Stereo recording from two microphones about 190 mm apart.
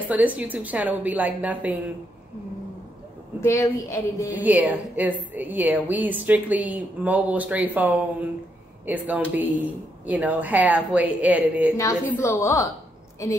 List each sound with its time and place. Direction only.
0.1 s a woman's voice: 10° right (ahead or behind)
3.3 s speech: 15° left (ahead or behind)
4.3 s a woman's voice: 10° right (ahead or behind)
11.7 s speech: 15° left (ahead or behind)